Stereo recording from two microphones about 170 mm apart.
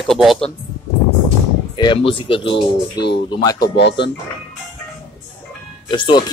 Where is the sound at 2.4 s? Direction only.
85° left.